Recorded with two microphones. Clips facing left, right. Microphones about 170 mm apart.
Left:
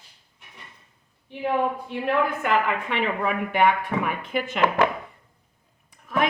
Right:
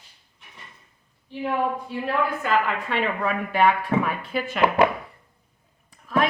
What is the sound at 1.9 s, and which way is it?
A woman's voice, 20° left (ahead or behind).